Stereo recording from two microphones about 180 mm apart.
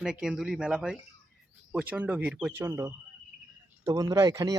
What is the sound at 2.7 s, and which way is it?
Speech, 15° right (ahead or behind).